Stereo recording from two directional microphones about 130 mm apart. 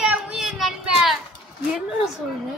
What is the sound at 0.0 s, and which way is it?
Child singing, 5° right (ahead or behind).